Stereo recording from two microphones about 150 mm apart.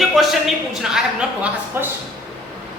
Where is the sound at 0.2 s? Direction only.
Centre (ahead or behind).